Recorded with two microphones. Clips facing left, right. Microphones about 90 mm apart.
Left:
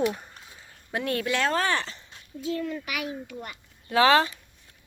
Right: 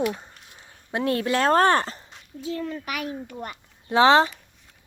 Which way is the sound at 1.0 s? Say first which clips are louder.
Right 4 dB; 30° right (ahead or behind).